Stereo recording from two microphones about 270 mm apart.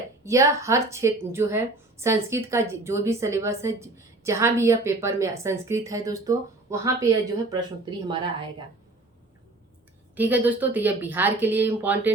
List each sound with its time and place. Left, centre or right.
0.3 s a woman's voice: centre
10.2 s a woman's voice: centre